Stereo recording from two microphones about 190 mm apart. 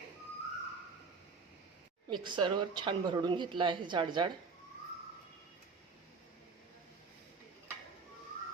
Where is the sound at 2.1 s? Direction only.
25° right (ahead or behind).